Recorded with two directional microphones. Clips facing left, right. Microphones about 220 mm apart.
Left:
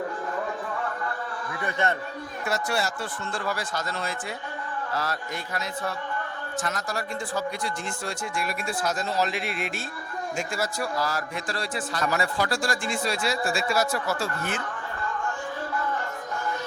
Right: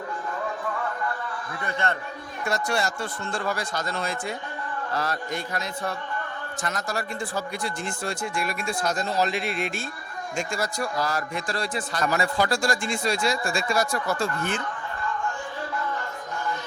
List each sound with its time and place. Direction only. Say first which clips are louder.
1.6 s a man's voice: left 1 dB; 20° left (ahead or behind)
2.4 s a man's voice: right 2 dB; 5° left (ahead or behind)
6.6 s a man's voice: right 1 dB; centre (ahead or behind)
8.0 s a man's voice: right 2 dB; centre (ahead or behind)